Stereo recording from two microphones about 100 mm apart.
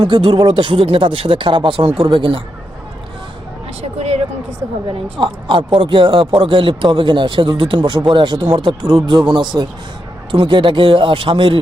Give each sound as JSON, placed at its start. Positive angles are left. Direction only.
{"t": 0.0, "sound": "a man's voice", "side_deg": -50}
{"t": 3.8, "sound": "a sound", "side_deg": -90}
{"t": 5.2, "sound": "a man's voice", "side_deg": -55}